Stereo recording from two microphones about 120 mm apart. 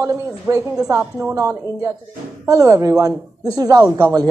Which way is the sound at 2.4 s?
25° right (ahead or behind).